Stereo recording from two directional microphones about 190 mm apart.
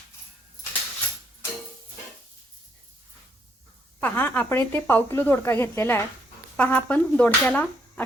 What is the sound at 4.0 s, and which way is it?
Speech, 10° left (ahead or behind).